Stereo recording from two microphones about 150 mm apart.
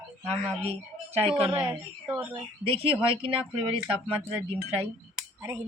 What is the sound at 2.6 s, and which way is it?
Speech, 40° right (ahead or behind).